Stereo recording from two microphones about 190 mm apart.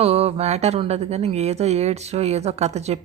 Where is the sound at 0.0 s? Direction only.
30° right (ahead or behind).